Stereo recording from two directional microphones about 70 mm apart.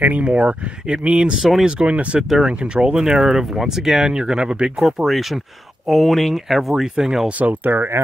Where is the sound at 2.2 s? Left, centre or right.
Centre.